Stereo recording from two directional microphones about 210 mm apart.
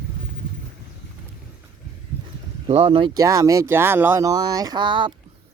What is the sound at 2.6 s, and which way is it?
Speech, 25° right (ahead or behind).